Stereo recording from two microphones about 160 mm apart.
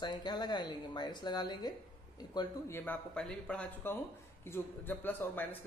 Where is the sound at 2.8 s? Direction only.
10° left (ahead or behind).